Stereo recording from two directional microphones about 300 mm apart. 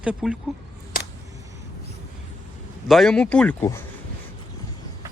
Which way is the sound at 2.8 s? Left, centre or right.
Centre.